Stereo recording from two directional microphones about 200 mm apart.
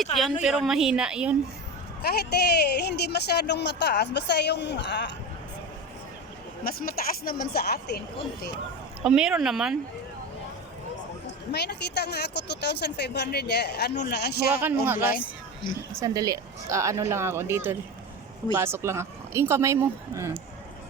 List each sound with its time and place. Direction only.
0.4 s a woman's voice: 5° right (ahead or behind)
2.0 s speech: 50° left (ahead or behind)
6.7 s speech: 45° left (ahead or behind)
9.0 s a woman's voice: 5° right (ahead or behind)
11.5 s speech: 55° left (ahead or behind)
14.5 s speech: 10° right (ahead or behind)